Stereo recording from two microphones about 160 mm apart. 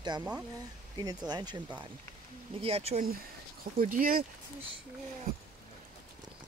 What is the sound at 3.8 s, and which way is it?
Speech, 60° right (ahead or behind).